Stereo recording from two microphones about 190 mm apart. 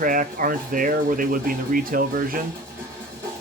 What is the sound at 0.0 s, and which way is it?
Speech, 45° right (ahead or behind).